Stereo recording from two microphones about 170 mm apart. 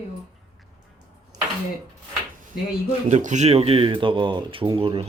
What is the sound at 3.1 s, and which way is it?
Speech, 45° right (ahead or behind).